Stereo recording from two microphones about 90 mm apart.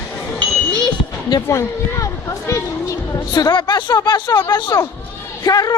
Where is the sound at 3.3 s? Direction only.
55° left (ahead or behind).